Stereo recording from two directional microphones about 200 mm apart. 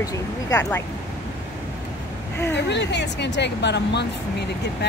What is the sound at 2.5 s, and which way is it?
Speech, 60° left (ahead or behind).